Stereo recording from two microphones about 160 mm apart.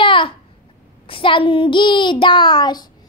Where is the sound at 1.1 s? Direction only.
30° left (ahead or behind).